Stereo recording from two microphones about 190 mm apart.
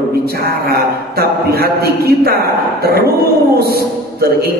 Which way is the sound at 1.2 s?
55° right (ahead or behind).